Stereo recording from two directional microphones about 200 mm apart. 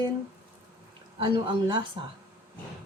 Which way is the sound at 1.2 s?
25° right (ahead or behind).